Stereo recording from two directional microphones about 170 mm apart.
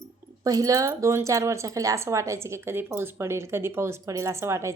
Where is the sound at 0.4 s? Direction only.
20° right (ahead or behind).